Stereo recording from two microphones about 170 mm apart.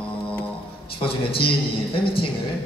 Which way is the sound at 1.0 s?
30° left (ahead or behind).